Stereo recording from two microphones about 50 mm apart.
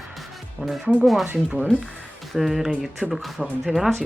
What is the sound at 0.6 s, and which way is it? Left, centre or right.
Speech, right.